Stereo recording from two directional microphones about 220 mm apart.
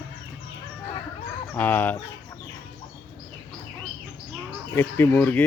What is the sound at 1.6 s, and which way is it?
Speech, 10° left (ahead or behind).